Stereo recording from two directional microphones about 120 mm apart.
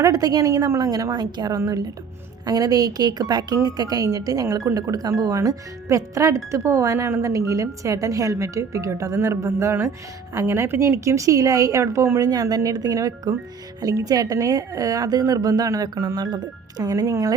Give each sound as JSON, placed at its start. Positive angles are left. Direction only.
{"t": 0.0, "sound": "a woman's voice", "side_deg": -30}